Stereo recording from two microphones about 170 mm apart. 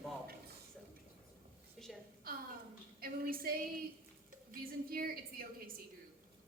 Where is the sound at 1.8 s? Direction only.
Centre (ahead or behind).